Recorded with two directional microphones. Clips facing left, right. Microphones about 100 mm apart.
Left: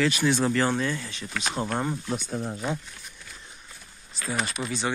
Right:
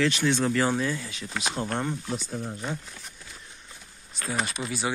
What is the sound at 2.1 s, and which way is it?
Speech, 65° left (ahead or behind).